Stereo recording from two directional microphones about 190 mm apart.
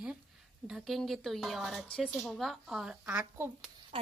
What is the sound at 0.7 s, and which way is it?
Speech, centre (ahead or behind).